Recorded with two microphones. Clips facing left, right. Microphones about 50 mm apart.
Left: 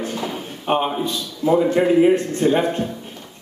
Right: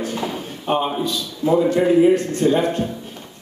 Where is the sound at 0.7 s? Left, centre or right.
Left.